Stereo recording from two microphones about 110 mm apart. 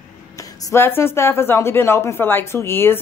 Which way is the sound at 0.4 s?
30° left (ahead or behind).